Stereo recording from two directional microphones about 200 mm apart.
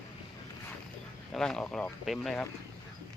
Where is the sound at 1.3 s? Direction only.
5° left (ahead or behind).